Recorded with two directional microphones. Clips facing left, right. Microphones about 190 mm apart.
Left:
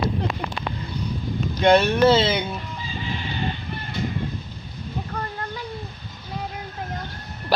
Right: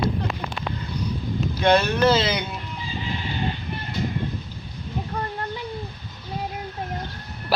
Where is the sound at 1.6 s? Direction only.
25° left (ahead or behind).